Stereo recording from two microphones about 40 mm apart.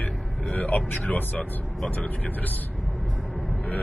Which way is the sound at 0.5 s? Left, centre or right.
Left.